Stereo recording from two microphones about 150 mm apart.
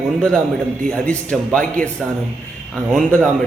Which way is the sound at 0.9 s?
5° left (ahead or behind).